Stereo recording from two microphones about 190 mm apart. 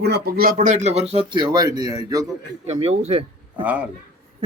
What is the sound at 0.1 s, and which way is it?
Speech, 55° right (ahead or behind).